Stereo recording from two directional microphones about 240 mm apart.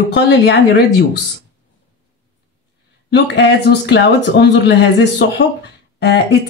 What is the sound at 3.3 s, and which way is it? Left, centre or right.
Speech, left.